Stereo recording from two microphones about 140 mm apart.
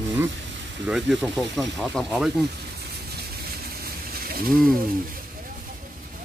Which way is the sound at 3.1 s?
90° right.